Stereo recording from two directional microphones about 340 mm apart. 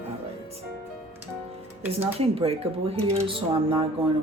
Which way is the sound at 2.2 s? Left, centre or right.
Centre.